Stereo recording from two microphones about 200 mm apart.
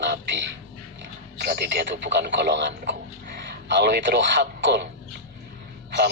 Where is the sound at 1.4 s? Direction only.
55° right (ahead or behind).